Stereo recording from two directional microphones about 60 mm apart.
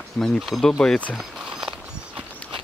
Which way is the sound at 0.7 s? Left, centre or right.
Centre.